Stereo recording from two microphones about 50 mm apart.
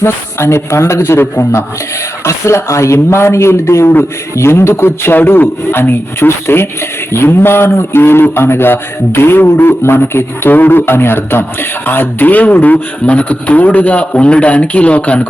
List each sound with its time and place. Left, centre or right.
0.0 s a man's voice: left
2.2 s a man's voice: left